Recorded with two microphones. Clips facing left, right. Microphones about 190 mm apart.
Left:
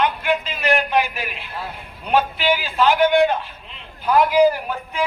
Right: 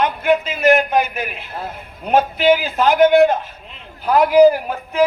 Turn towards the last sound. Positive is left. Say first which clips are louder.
# right 4 dB
turn(degrees=-40)  # may be behind; listen again after turning